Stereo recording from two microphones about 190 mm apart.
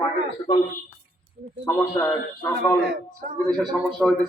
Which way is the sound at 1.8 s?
10° left (ahead or behind).